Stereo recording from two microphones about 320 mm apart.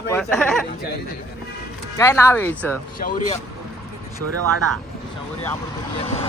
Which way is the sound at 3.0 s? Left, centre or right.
Left.